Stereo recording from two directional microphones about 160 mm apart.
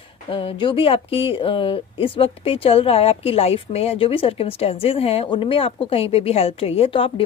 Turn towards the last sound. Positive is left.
turn(degrees=35)  # may be behind; listen again after turning